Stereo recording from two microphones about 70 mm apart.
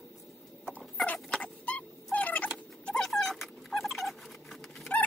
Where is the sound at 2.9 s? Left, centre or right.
Centre.